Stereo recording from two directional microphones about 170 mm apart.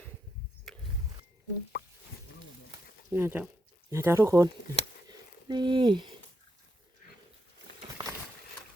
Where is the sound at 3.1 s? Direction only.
15° right (ahead or behind).